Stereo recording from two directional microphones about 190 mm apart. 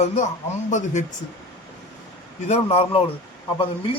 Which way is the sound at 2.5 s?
35° left (ahead or behind).